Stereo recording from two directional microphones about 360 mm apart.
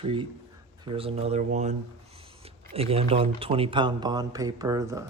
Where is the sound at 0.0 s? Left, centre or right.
Centre.